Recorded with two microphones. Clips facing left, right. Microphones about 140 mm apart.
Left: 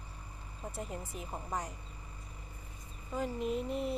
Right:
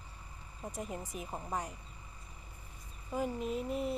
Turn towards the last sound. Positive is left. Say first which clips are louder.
# left 1 dB
turn(degrees=0)  # may be behind; listen again after turning